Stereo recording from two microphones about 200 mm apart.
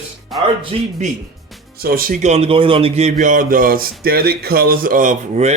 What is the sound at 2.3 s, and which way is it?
Speech, 30° right (ahead or behind).